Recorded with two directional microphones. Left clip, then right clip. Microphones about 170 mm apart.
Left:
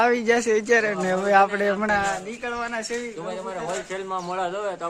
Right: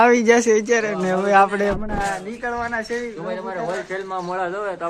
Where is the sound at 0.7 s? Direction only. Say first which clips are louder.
Right 1 dB; 10° left (ahead or behind).